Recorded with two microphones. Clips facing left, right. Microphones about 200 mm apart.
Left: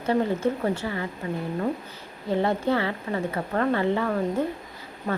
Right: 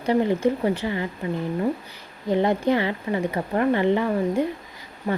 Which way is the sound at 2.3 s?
15° right (ahead or behind).